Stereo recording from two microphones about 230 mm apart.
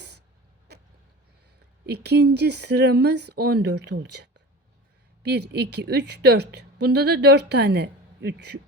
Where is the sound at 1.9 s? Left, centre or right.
Right.